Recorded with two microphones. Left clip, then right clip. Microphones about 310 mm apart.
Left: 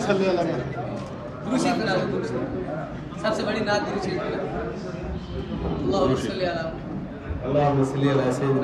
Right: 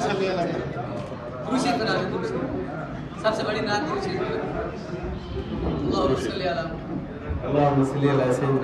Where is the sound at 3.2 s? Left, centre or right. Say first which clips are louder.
Even; centre.